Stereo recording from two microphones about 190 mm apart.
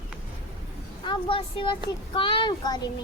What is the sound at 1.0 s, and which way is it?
Speech, 25° left (ahead or behind).